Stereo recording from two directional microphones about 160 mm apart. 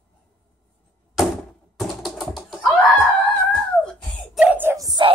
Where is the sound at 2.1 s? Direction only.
Centre (ahead or behind).